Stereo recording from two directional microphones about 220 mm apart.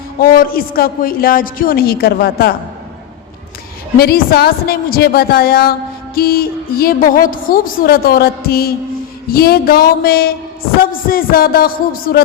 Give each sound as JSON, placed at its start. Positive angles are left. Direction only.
{"t": 0.2, "sound": "a woman's voice", "side_deg": 40}
{"t": 3.9, "sound": "a woman's voice", "side_deg": 45}